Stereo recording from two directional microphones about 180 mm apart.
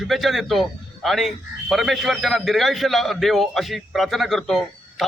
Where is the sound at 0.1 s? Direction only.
Centre (ahead or behind).